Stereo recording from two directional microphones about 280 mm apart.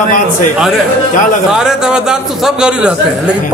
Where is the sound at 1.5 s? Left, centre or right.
Centre.